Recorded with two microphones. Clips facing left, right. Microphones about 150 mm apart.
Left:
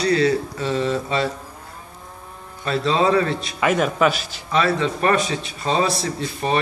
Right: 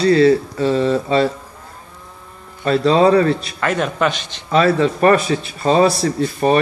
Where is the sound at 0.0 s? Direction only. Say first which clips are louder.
Right 6 dB; 30° right (ahead or behind).